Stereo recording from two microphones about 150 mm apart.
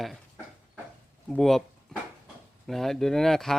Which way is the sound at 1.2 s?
Centre (ahead or behind).